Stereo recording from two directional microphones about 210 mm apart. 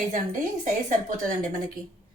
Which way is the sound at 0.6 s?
35° right (ahead or behind).